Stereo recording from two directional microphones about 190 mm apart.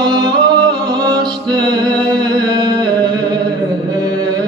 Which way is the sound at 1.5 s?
20° right (ahead or behind).